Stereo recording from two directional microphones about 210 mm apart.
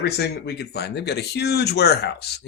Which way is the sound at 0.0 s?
50° left (ahead or behind).